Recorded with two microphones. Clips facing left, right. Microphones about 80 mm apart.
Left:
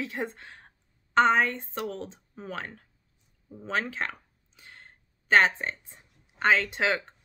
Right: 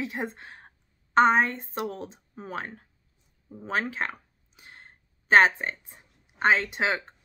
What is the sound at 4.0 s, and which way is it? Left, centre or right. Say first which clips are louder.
Whispering: right 2 dB; centre.